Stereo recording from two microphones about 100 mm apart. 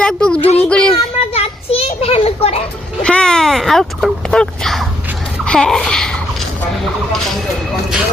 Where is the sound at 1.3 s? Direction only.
80° left.